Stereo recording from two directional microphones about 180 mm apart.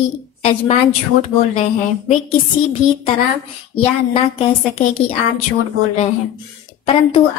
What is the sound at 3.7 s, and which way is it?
A woman's voice, 30° left (ahead or behind).